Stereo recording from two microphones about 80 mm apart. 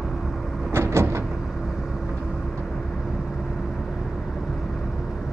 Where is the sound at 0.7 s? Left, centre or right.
Right.